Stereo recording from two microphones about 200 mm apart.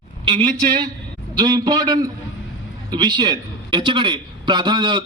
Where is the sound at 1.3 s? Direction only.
20° right (ahead or behind).